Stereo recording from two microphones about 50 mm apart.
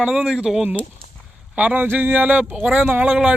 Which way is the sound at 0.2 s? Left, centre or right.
Centre.